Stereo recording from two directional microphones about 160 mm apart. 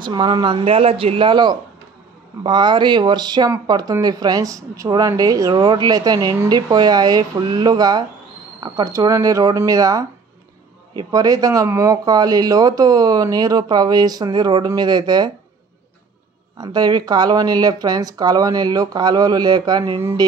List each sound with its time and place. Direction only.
0.0 s speech: 30° right (ahead or behind)
16.5 s speech: 25° right (ahead or behind)